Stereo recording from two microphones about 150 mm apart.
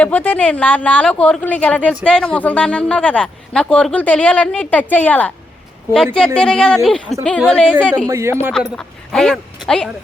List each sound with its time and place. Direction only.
0.0 s speech: 10° left (ahead or behind)
8.0 s speech: 20° right (ahead or behind)
8.7 s speech: 5° left (ahead or behind)